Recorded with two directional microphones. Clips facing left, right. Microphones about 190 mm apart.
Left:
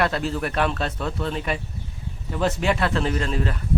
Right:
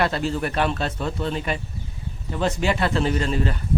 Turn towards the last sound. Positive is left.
turn(degrees=0)  # may be behind; listen again after turning